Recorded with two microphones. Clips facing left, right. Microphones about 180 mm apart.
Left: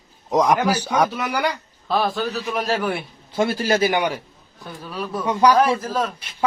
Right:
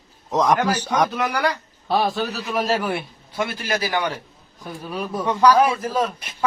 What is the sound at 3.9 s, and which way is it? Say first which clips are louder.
Speech: left 3 dB; 15° left (ahead or behind).